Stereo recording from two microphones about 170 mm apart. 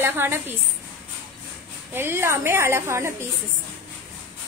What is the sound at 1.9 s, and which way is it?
A woman's voice, 15° right (ahead or behind).